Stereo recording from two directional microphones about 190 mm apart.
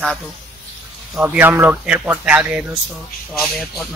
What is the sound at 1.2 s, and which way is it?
Speech, 10° right (ahead or behind).